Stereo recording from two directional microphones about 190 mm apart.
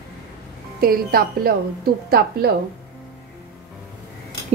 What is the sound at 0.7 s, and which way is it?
A woman's voice, 50° right (ahead or behind).